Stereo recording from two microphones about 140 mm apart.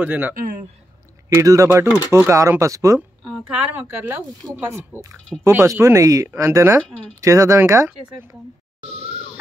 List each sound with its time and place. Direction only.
0.0 s speech: 10° right (ahead or behind)
1.3 s speech: 25° right (ahead or behind)
3.3 s a woman's voice: 5° right (ahead or behind); by 8.4 s 20° right (ahead or behind)
8.8 s a sound: 45° right (ahead or behind)